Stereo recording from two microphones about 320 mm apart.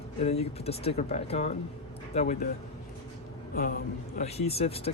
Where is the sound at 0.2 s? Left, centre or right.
Centre.